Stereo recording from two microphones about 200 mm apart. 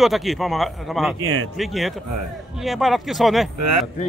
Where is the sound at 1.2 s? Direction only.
90° right.